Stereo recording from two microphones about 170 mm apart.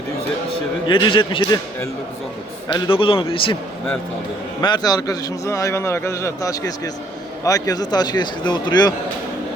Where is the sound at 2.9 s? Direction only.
30° left (ahead or behind).